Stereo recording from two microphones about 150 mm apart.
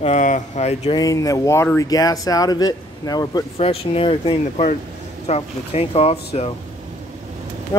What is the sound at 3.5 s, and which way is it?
Speech, 40° left (ahead or behind).